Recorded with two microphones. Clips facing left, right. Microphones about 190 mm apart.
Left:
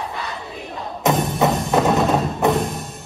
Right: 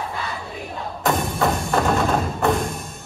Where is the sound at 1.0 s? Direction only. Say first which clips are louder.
Left 3 dB; 20° left (ahead or behind).